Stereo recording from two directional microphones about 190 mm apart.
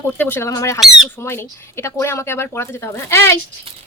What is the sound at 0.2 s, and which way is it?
Speech, 10° left (ahead or behind).